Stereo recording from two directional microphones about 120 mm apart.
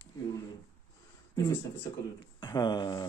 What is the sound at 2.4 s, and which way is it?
Speech, 35° left (ahead or behind).